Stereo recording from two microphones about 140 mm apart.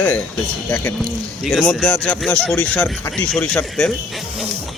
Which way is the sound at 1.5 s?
Centre (ahead or behind).